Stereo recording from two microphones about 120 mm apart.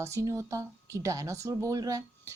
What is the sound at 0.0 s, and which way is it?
Speech, 25° right (ahead or behind).